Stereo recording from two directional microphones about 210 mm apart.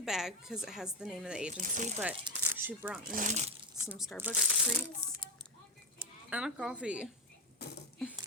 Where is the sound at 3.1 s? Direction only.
40° right (ahead or behind).